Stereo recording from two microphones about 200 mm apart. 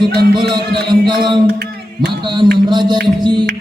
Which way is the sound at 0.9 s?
25° right (ahead or behind).